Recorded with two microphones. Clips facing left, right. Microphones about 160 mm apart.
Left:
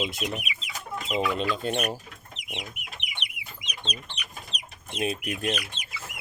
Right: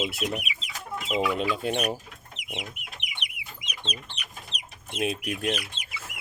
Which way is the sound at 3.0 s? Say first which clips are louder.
Left 1 dB; 25° left (ahead or behind).